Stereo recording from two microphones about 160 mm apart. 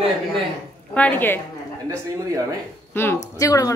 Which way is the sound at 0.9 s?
10° left (ahead or behind).